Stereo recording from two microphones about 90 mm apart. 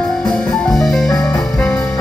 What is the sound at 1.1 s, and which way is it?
Music, 40° left (ahead or behind).